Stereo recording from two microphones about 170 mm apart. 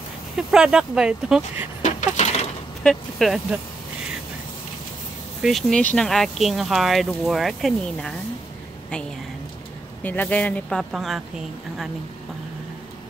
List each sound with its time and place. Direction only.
0.4 s speech: 5° right (ahead or behind)
1.8 s coin: 45° left (ahead or behind)
2.8 s speech: 5° left (ahead or behind)
5.4 s speech: centre (ahead or behind)
10.0 s speech: 10° left (ahead or behind)